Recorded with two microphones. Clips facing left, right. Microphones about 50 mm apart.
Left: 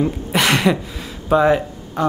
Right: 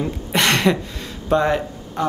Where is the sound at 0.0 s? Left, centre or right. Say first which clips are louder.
Left 2 dB; centre.